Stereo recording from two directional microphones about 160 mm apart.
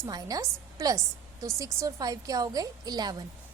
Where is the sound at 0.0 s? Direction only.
25° right (ahead or behind).